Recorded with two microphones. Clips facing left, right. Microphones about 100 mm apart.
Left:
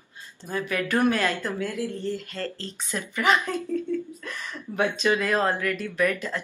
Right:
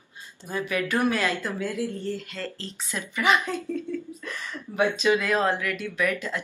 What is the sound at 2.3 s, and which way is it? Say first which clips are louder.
Speech: left 2 dB; 35° left (ahead or behind).